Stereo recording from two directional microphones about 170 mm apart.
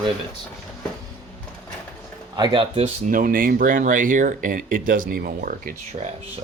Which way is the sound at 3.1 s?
55° right (ahead or behind).